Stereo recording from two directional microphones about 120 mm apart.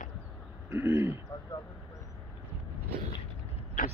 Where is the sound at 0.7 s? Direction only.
20° right (ahead or behind).